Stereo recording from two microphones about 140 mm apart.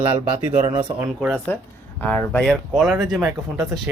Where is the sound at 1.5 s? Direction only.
10° left (ahead or behind).